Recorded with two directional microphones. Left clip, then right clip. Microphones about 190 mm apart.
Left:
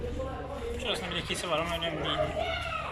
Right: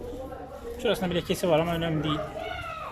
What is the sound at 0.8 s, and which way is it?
Speech, 60° right (ahead or behind).